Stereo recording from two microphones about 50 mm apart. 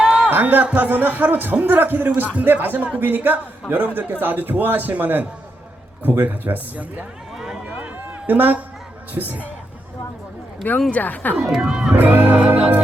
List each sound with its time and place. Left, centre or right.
0.0 s music: centre
0.3 s a man's voice: right
7.3 s run: centre
8.3 s a man's voice: right
10.9 s speech: left
11.4 s speech: centre
11.9 s a man's voice: right
12.4 s music: right